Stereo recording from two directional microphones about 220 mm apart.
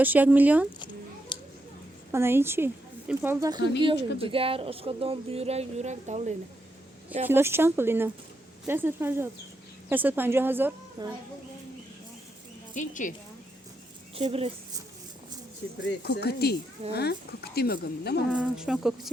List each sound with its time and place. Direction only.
0.0 s a woman's voice: 10° right (ahead or behind)
1.3 s a sound: 20° left (ahead or behind)
2.1 s a woman's voice: 10° right (ahead or behind); by 6.3 s 30° right (ahead or behind)
7.3 s a woman's voice: 10° right (ahead or behind)
12.7 s speech: 35° left (ahead or behind)
14.2 s speech: 25° right (ahead or behind)
16.0 s speech: 45° left (ahead or behind)
18.3 s speech: 5° right (ahead or behind)